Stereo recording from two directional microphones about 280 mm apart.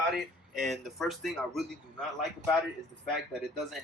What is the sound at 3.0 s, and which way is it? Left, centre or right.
Speech, centre.